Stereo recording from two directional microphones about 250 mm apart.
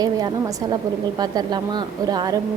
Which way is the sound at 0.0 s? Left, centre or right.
Centre.